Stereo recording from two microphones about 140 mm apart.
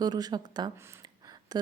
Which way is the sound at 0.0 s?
30° right (ahead or behind).